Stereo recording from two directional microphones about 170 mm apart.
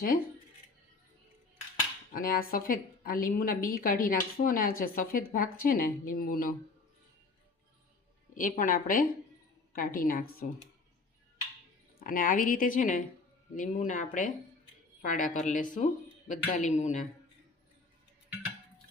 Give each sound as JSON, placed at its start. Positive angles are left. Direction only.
{"t": 2.1, "sound": "a woman's voice", "side_deg": 55}
{"t": 8.4, "sound": "a woman's voice", "side_deg": 50}
{"t": 11.9, "sound": "speech", "side_deg": 55}